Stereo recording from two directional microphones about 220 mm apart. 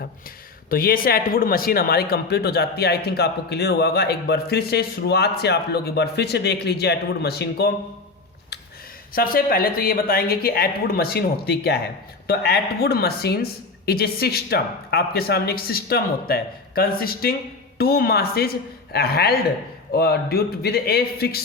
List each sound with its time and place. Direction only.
0.7 s speech: 40° left (ahead or behind)
9.1 s speech: 40° left (ahead or behind)